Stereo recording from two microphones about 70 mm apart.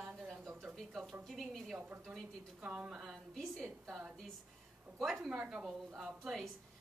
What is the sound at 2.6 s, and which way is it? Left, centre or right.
Speech, centre.